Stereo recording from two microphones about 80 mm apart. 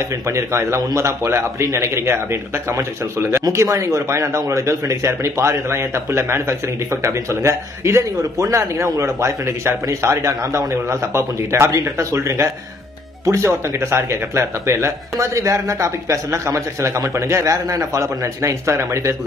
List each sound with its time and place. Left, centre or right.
0.3 s speech: right